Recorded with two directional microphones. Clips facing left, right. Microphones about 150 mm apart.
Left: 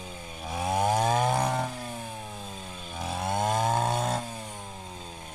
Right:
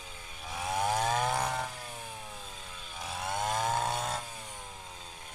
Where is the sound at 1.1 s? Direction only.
20° left (ahead or behind).